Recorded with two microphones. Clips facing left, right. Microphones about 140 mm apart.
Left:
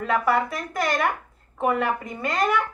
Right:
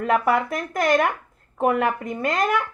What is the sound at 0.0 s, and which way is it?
Speech, 50° right (ahead or behind).